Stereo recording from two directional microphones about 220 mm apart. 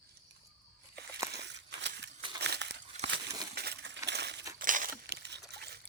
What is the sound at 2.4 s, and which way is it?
Crumpling, 50° right (ahead or behind).